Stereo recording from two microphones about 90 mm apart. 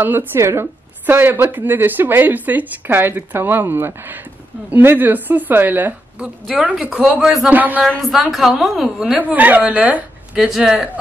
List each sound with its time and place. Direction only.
0.0 s a woman's voice: 20° right (ahead or behind)
6.2 s a woman's voice: 5° right (ahead or behind)
7.4 s a woman's voice: 20° right (ahead or behind)
8.0 s a woman's voice: centre (ahead or behind)
9.2 s a woman's voice: 20° right (ahead or behind)